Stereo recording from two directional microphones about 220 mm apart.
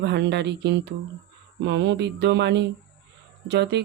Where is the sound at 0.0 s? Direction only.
50° right (ahead or behind).